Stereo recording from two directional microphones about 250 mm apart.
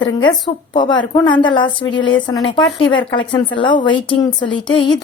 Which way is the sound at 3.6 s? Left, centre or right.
Centre.